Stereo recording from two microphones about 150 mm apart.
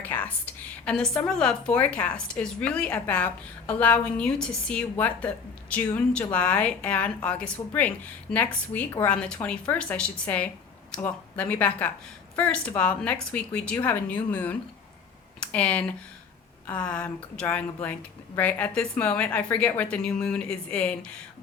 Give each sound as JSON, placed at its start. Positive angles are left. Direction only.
{"t": 0.0, "sound": "a woman's voice", "side_deg": 10}